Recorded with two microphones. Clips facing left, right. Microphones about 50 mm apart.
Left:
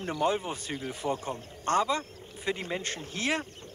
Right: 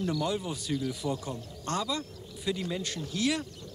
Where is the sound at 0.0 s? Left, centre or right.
Left.